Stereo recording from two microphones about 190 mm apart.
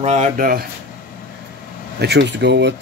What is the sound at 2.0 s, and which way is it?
Speech, 65° right (ahead or behind).